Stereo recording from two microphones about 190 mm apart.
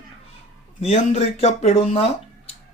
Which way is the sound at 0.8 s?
35° left (ahead or behind).